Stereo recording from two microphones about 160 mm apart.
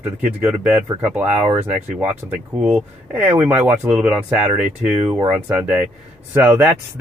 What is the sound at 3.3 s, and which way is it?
Speech, 10° right (ahead or behind).